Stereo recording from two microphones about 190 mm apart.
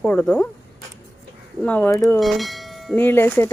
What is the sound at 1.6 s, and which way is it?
A woman's voice, 5° left (ahead or behind).